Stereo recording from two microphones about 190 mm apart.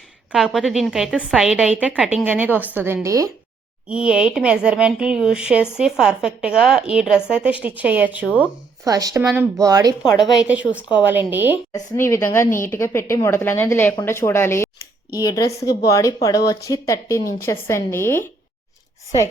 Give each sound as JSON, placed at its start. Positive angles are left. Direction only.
{"t": 0.3, "sound": "a woman's voice", "side_deg": -5}
{"t": 3.8, "sound": "a woman's voice", "side_deg": -5}
{"t": 10.2, "sound": "a woman's voice", "side_deg": -5}
{"t": 11.7, "sound": "a woman's voice", "side_deg": 15}